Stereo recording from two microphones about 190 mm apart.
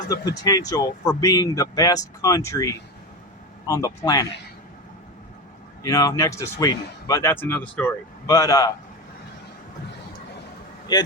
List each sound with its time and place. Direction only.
0.1 s speech: 20° left (ahead or behind)
5.8 s a man's voice: 20° left (ahead or behind)
10.9 s speech: 20° left (ahead or behind)